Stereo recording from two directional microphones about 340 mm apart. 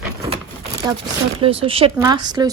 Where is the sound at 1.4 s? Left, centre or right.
Centre.